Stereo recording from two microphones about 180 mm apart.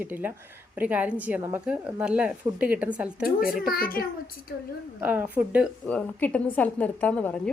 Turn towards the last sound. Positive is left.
turn(degrees=5)  # may be behind; listen again after turning